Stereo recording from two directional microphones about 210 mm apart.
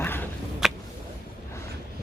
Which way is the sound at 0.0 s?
10° left (ahead or behind).